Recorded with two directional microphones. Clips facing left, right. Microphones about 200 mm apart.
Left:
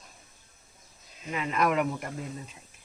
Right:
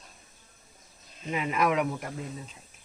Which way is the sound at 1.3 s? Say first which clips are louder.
Right 2 dB; 15° right (ahead or behind).